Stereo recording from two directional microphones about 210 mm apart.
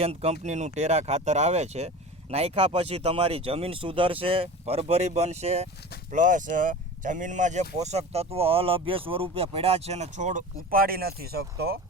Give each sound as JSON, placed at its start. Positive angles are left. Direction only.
{"t": 0.0, "sound": "speech", "side_deg": -30}